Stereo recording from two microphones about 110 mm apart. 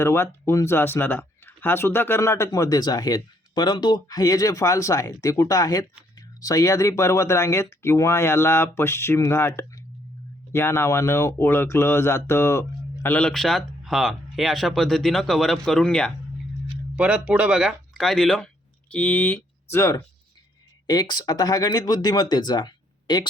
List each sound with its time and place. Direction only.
0.0 s speech: 25° left (ahead or behind)
2.5 s speech: 35° left (ahead or behind)
13.1 s speech: 5° left (ahead or behind)
16.9 s speech: 10° right (ahead or behind); by 20.0 s 25° left (ahead or behind)
20.8 s speech: 40° left (ahead or behind)